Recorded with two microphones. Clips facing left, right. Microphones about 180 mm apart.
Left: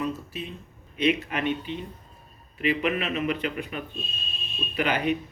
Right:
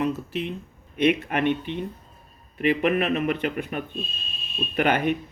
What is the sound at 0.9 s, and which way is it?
Speech, 55° right (ahead or behind).